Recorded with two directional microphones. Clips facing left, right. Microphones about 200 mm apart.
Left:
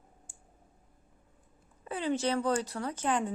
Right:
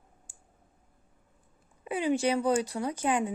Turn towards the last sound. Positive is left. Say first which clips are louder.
# right 3 dB
turn(degrees=-10)  # may be behind; listen again after turning